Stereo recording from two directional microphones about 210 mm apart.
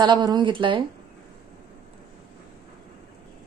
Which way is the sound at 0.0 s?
20° right (ahead or behind).